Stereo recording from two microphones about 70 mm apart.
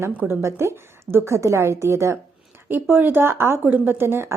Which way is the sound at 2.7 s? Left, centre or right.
Right.